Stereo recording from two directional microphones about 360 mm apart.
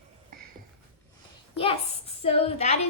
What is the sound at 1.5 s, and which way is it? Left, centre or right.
A child's voice, centre.